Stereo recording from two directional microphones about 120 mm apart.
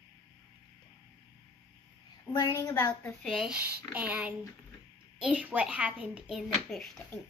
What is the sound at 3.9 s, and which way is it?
A child's voice, 15° right (ahead or behind).